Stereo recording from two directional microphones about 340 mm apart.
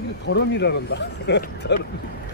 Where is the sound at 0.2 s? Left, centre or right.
Left.